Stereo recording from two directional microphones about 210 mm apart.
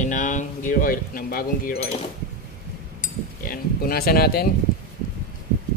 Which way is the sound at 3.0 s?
45° left (ahead or behind).